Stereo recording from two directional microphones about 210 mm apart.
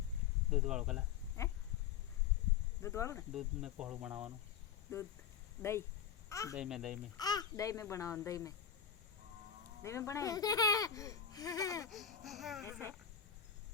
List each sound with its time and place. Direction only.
0.5 s speech: 5° right (ahead or behind)
1.4 s a sound: 15° left (ahead or behind)
2.8 s speech: 15° left (ahead or behind)
3.3 s speech: 5° right (ahead or behind)
6.2 s a sound: 15° left (ahead or behind)
6.5 s speech: centre (ahead or behind)
7.2 s speech: 20° left (ahead or behind)
9.8 s speech: 15° left (ahead or behind)
11.9 s speech: centre (ahead or behind)
12.6 s speech: 10° right (ahead or behind)